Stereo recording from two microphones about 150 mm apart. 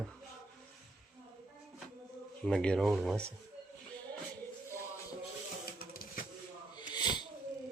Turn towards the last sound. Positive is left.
turn(degrees=30)  # may be behind; listen again after turning